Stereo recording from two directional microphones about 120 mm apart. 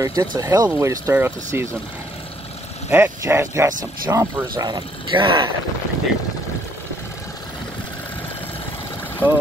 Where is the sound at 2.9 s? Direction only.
20° right (ahead or behind); by 5.5 s 45° right (ahead or behind).